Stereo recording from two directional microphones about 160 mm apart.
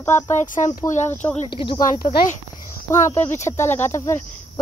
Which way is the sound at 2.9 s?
15° left (ahead or behind).